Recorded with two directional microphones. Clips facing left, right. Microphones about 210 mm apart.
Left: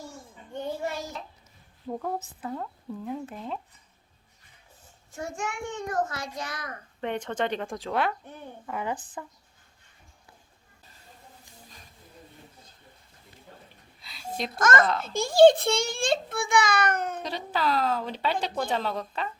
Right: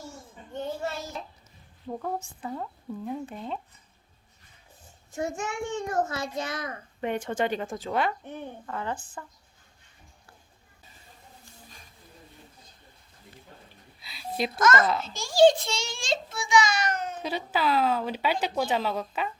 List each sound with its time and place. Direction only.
0.5 s a sound: 15° left (ahead or behind)
1.9 s speech: centre (ahead or behind)
5.1 s a child's voice: 20° right (ahead or behind)
7.0 s speech: 5° right (ahead or behind)
8.6 s a woman's voice: 15° left (ahead or behind)
14.0 s a sound: 5° right (ahead or behind)
14.6 s a child's voice: 50° left (ahead or behind)
17.2 s speech: 5° right (ahead or behind)